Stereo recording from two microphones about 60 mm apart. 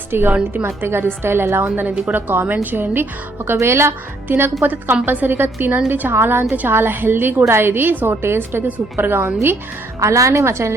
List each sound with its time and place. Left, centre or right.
0.1 s a woman's voice: right
10.0 s a woman's voice: right